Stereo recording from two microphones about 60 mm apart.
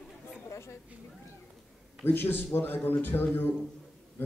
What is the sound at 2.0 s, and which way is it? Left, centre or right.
A man's voice, left.